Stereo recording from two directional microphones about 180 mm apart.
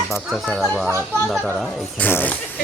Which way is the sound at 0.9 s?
15° right (ahead or behind).